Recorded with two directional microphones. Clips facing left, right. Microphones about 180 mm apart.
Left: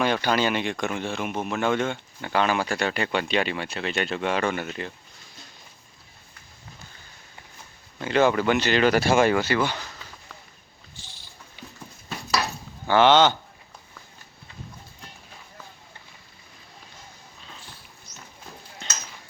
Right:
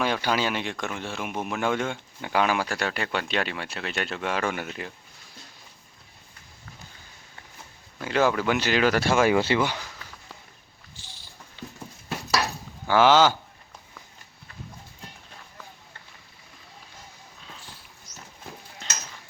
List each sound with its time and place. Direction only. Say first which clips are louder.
0.0 s speech: left 2 dB; 5° right (ahead or behind)
8.0 s speech: left 3 dB; 5° right (ahead or behind)
9.4 s speech: right 1 dB; 25° right (ahead or behind)
9.6 s speech: left 1 dB; 10° right (ahead or behind)
11.6 s horse: right 4 dB; 15° left (ahead or behind)
12.9 s speech: left 1 dB; 5° right (ahead or behind)